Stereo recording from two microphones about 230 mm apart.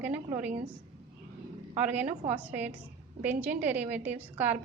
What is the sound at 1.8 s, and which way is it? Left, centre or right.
A woman's voice, centre.